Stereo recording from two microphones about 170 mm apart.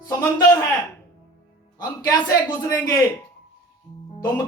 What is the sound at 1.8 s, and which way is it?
Speech, 20° left (ahead or behind).